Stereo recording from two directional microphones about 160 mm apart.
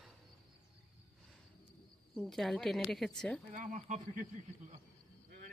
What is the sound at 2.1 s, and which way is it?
Speech, centre (ahead or behind).